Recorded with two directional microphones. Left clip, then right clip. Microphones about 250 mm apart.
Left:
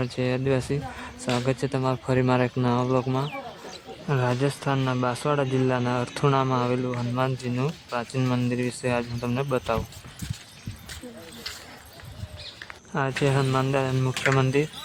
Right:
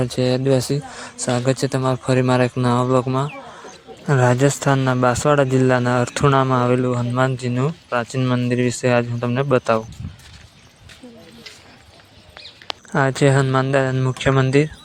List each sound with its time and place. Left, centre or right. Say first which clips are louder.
0.0 s speech: right 7 dB; right
12.9 s speech: right 8 dB; right